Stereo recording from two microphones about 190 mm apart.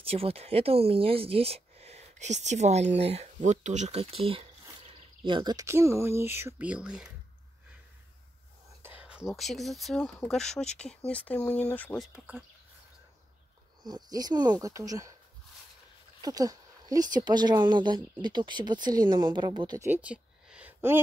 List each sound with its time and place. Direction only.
0.0 s speech: 30° right (ahead or behind); by 7.1 s 5° right (ahead or behind)
9.0 s speech: 5° right (ahead or behind)
12.1 s speech: 5° right (ahead or behind)
13.8 s speech: 20° right (ahead or behind)
16.2 s speech: 20° right (ahead or behind)
19.9 s a sound: 5° right (ahead or behind)